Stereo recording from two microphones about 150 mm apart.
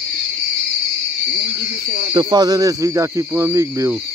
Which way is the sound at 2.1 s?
30° right (ahead or behind).